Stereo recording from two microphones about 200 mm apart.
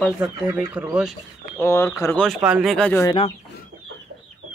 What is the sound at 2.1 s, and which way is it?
Speech, centre (ahead or behind).